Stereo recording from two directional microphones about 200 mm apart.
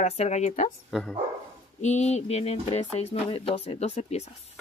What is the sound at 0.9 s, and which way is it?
Speech, centre (ahead or behind).